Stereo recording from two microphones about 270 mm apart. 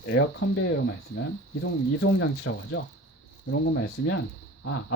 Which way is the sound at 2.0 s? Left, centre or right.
Left.